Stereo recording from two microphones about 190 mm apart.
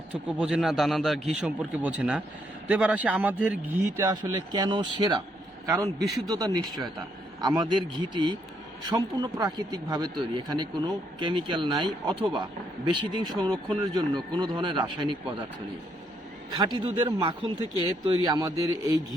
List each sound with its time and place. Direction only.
0.3 s a man's voice: 5° right (ahead or behind); by 15.4 s 25° right (ahead or behind)
16.5 s speech: 20° right (ahead or behind)